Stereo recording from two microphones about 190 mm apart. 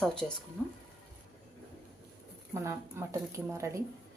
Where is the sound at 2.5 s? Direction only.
15° right (ahead or behind).